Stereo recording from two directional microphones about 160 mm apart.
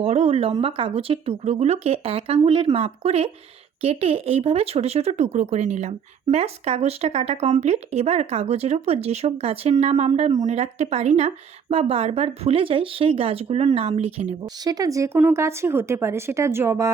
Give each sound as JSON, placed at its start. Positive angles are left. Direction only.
{"t": 0.0, "sound": "speech", "side_deg": -40}
{"t": 14.6, "sound": "speech", "side_deg": -25}